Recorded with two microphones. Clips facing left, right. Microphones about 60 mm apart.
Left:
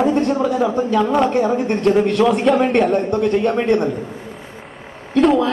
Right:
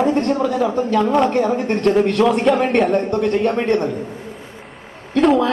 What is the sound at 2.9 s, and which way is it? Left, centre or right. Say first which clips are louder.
Speech: left 1 dB; centre.